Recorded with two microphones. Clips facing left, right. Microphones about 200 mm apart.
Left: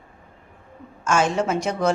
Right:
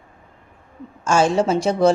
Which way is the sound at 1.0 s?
30° right (ahead or behind).